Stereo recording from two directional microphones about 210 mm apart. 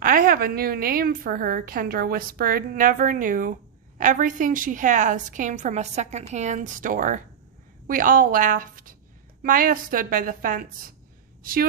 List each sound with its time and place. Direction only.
0.0 s a woman's voice: 40° right (ahead or behind)